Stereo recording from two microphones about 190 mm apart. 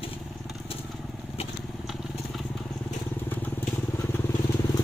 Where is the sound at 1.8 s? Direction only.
Centre (ahead or behind); by 4.8 s 15° left (ahead or behind).